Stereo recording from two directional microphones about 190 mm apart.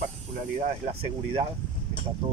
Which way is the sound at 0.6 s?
35° right (ahead or behind).